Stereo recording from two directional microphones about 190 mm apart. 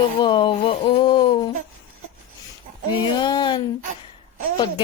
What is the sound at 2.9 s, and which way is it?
Speech, 25° left (ahead or behind).